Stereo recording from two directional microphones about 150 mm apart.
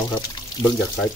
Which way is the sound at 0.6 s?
20° left (ahead or behind).